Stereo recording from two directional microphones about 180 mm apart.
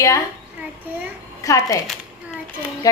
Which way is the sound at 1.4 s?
15° left (ahead or behind).